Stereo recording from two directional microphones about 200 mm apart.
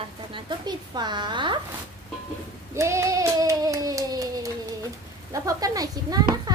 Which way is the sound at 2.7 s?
15° right (ahead or behind).